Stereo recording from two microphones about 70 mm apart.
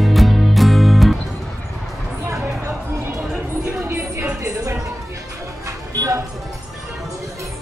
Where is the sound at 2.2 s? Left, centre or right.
Right.